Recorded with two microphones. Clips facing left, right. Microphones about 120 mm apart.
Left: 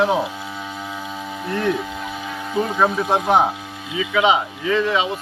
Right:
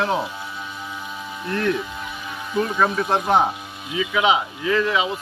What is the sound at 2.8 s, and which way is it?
Speech, 15° left (ahead or behind).